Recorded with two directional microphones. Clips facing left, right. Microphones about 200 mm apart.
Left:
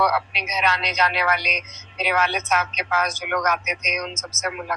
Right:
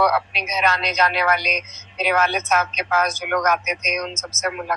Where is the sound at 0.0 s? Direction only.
45° right (ahead or behind).